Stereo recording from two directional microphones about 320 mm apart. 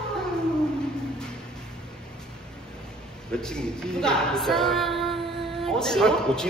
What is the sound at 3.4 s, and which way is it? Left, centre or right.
A man's voice, centre.